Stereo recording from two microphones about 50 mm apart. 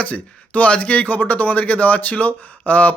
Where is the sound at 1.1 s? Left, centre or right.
Left.